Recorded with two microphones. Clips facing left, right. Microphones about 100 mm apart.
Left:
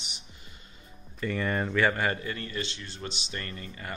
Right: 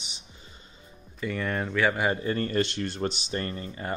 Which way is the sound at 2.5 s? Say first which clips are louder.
Right 9 dB; 55° right (ahead or behind).